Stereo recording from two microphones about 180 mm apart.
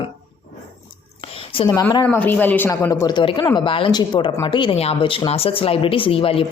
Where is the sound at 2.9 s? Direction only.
25° left (ahead or behind).